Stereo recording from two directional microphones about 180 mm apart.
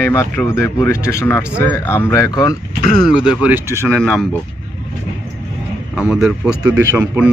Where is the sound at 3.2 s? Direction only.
5° right (ahead or behind).